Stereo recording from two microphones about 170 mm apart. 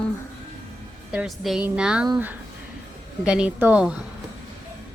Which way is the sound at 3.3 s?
5° right (ahead or behind).